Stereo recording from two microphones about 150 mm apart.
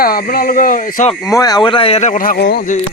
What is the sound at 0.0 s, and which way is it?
Speech, 80° left.